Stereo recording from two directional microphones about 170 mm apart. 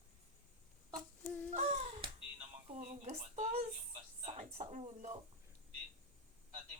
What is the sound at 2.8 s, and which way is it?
A woman's voice, 40° right (ahead or behind).